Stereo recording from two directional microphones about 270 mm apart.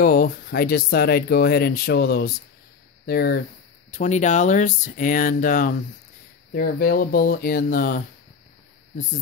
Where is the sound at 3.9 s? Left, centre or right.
Left.